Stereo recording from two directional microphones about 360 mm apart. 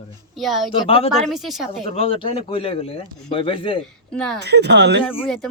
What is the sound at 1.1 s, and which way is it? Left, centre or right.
Speech, centre.